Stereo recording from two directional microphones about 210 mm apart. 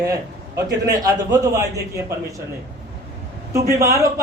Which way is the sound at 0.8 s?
15° right (ahead or behind).